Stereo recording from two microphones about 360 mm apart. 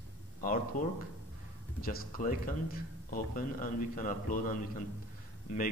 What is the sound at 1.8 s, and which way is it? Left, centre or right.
Speech, left.